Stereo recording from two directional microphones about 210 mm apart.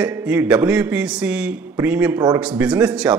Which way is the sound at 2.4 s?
5° right (ahead or behind).